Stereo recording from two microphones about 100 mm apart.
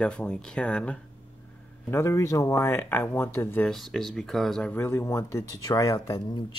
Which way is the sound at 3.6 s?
5° left (ahead or behind).